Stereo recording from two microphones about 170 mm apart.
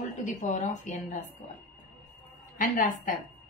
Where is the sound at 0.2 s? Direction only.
45° left (ahead or behind).